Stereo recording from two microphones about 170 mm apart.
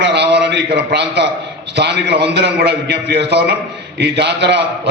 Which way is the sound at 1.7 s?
80° right.